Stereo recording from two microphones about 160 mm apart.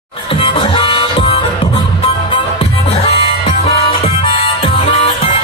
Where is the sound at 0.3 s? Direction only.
35° left (ahead or behind).